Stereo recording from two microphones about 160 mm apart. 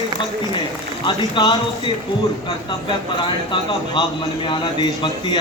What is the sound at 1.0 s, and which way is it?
A man's voice, 30° left (ahead or behind).